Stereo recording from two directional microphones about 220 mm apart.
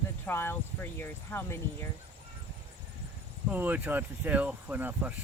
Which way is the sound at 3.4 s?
10° right (ahead or behind).